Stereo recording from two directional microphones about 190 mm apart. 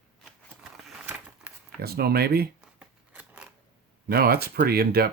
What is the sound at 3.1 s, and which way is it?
Scissors, 5° right (ahead or behind).